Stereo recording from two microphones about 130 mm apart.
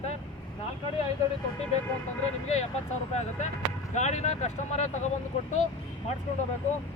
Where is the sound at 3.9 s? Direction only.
65° left (ahead or behind).